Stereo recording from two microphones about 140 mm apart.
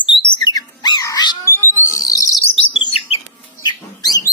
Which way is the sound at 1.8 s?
25° left (ahead or behind).